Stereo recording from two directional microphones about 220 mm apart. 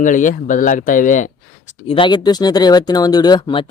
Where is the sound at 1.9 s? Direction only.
20° left (ahead or behind).